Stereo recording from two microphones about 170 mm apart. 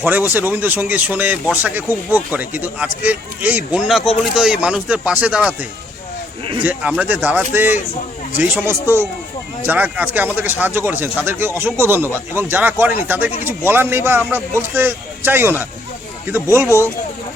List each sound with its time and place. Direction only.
0.0 s speech: 10° right (ahead or behind)
6.6 s speech: 10° right (ahead or behind)